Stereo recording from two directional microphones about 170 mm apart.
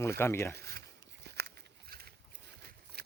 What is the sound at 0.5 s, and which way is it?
Speech, 70° right (ahead or behind).